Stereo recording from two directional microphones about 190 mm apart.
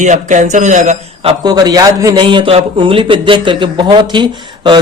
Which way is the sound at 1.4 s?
20° right (ahead or behind).